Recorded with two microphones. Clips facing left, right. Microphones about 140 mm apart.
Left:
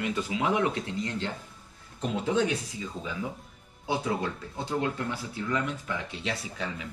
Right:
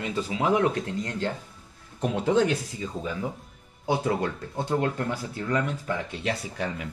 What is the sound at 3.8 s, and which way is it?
Speech, 55° right (ahead or behind).